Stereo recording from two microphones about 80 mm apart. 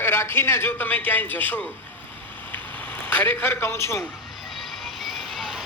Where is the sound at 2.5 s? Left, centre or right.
Left.